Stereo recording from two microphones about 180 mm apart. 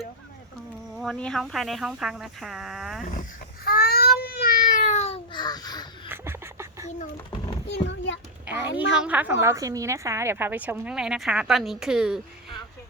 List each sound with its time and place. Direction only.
0.9 s speech: 5° left (ahead or behind)
3.1 s babbling: 50° left (ahead or behind); by 5.9 s 20° left (ahead or behind)
6.1 s duck: 15° right (ahead or behind)
7.3 s a sound: 25° left (ahead or behind)
7.7 s a sound: 85° left
8.4 s a child's voice: 15° right (ahead or behind)